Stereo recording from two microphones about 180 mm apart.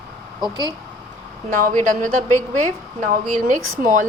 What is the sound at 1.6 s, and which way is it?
A woman's voice, 50° right (ahead or behind).